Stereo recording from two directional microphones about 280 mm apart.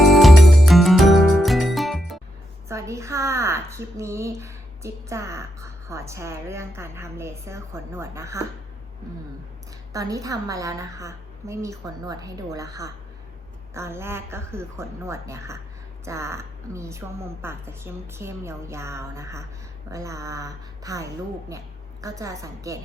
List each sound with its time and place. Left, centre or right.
0.0 s music: centre
2.6 s a woman's voice: centre
9.9 s a woman's voice: centre